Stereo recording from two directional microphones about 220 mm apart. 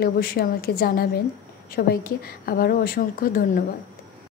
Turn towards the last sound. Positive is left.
turn(degrees=40)  # may be behind; listen again after turning